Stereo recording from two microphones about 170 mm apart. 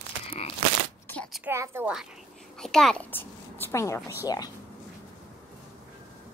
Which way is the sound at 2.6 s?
5° left (ahead or behind).